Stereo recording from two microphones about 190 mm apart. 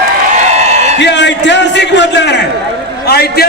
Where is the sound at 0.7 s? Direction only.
35° right (ahead or behind).